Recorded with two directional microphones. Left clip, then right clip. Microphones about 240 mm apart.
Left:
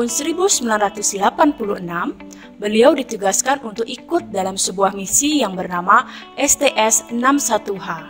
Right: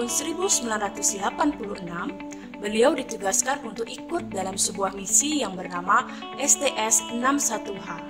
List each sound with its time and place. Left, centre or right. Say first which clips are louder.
0.0 s speech: left 8 dB; left